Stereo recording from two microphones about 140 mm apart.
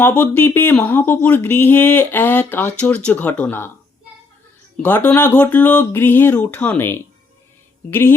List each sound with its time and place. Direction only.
0.0 s speech: 15° left (ahead or behind)
4.8 s speech: 10° left (ahead or behind)